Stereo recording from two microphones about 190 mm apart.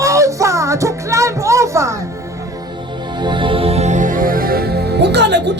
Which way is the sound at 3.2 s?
25° right (ahead or behind).